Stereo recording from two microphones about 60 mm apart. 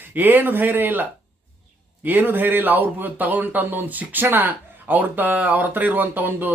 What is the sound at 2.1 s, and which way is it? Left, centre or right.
Speech, right.